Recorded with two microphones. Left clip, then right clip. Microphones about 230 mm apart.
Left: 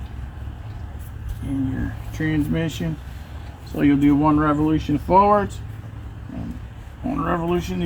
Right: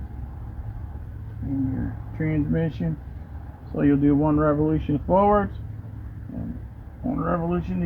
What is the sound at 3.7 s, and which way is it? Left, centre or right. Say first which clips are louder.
Speech: left 3 dB; centre.